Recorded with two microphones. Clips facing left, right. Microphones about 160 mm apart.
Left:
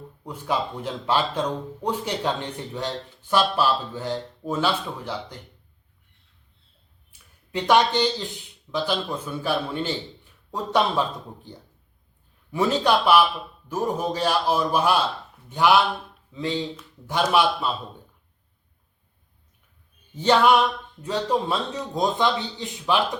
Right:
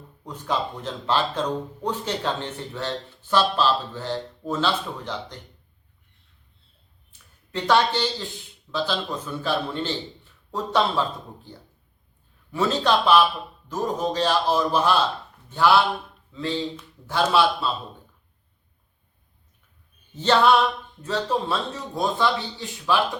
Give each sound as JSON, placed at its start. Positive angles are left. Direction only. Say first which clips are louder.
{"t": 0.3, "sound": "speech", "louder": "even", "side_deg": 10}
{"t": 7.1, "sound": "speech", "louder": "left 2 dB", "side_deg": 15}
{"t": 12.5, "sound": "speech", "louder": "left 1 dB", "side_deg": 15}
{"t": 20.1, "sound": "speech", "louder": "even", "side_deg": 10}